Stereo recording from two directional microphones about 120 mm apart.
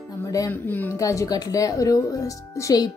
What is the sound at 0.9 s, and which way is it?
Speech, 25° left (ahead or behind).